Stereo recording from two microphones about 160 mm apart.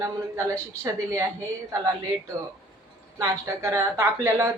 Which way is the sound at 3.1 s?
15° right (ahead or behind).